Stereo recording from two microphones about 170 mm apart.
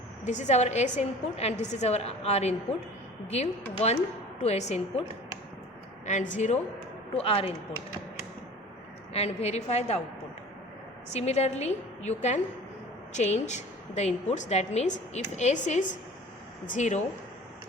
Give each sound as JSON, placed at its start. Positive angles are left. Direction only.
{"t": 0.3, "sound": "a woman's voice", "side_deg": 45}
{"t": 6.1, "sound": "a woman's voice", "side_deg": 45}
{"t": 7.1, "sound": "a woman's voice", "side_deg": 35}
{"t": 9.1, "sound": "a woman's voice", "side_deg": 40}
{"t": 11.1, "sound": "a woman's voice", "side_deg": 40}